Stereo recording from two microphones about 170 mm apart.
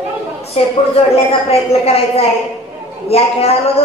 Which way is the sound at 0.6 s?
35° left (ahead or behind).